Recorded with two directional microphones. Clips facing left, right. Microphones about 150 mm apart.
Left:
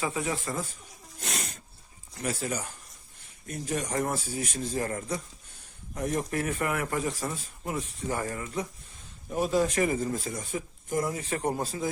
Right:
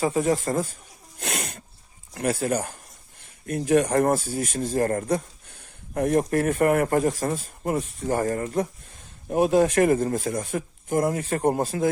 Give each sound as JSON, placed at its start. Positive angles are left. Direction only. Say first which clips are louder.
{"t": 0.0, "sound": "a man's voice", "louder": "right 8 dB", "side_deg": -40}
{"t": 1.2, "sound": "a sound", "louder": "right 5 dB", "side_deg": -60}
{"t": 2.1, "sound": "a man's voice", "louder": "right 8 dB", "side_deg": -55}
{"t": 9.3, "sound": "speech", "louder": "right 7 dB", "side_deg": -55}